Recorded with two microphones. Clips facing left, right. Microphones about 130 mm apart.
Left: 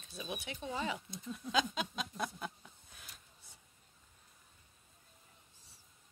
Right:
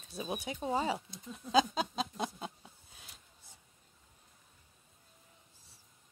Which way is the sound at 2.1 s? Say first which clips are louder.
Right 2 dB; 25° right (ahead or behind).